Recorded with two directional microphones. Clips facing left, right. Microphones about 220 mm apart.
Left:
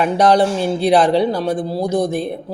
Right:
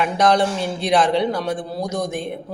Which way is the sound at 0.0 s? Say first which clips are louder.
Left 4 dB; 35° left (ahead or behind).